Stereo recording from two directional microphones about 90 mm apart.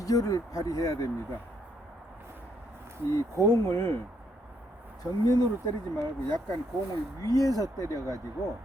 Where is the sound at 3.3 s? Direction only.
35° left (ahead or behind).